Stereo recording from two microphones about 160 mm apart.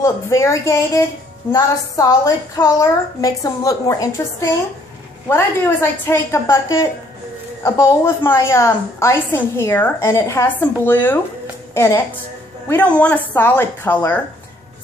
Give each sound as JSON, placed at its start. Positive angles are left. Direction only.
{"t": 0.0, "sound": "a woman's voice", "side_deg": 20}